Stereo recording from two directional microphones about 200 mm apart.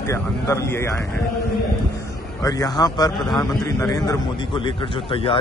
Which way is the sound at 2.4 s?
20° left (ahead or behind).